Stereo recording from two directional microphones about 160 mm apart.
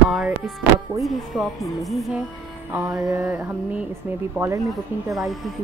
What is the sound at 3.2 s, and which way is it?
Speech, 10° right (ahead or behind).